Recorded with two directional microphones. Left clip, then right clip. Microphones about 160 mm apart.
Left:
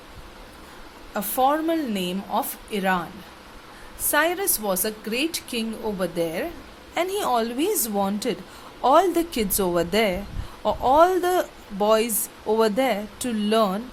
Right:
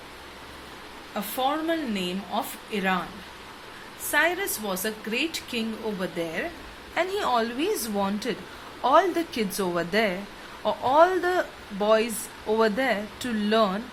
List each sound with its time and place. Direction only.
1.1 s speech: 60° left (ahead or behind)
4.1 s a woman's voice: 50° left (ahead or behind)
6.9 s speech: 35° left (ahead or behind)